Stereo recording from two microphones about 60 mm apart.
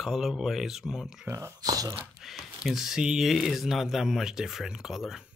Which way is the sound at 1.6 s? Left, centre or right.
Right.